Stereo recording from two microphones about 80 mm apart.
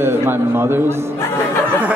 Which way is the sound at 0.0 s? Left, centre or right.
Right.